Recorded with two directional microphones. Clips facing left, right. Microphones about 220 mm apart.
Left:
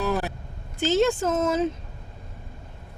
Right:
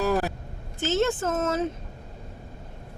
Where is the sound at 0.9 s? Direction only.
15° left (ahead or behind).